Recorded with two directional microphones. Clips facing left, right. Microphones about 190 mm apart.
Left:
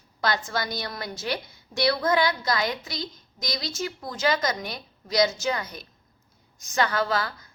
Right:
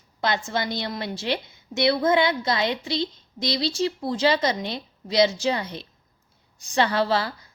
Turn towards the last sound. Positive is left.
turn(degrees=-30)  # may be behind; listen again after turning